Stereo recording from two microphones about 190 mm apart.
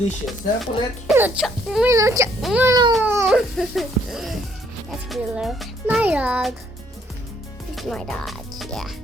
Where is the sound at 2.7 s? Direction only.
25° right (ahead or behind).